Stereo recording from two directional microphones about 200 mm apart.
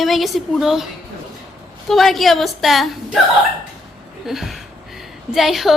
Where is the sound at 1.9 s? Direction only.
Centre (ahead or behind).